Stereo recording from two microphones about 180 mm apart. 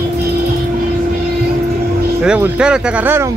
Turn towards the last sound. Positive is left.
turn(degrees=-10)  # may be behind; listen again after turning